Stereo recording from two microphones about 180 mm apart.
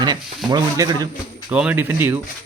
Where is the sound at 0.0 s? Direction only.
20° right (ahead or behind).